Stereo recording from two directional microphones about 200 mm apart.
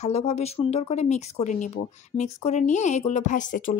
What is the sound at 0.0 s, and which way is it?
Speech, 30° left (ahead or behind).